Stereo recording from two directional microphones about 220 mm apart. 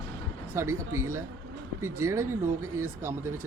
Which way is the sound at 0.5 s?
15° right (ahead or behind).